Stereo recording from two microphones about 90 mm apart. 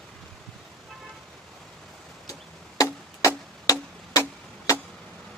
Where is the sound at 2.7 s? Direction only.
40° left (ahead or behind).